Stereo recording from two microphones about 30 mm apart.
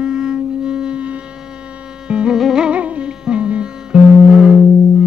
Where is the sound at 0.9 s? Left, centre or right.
Right.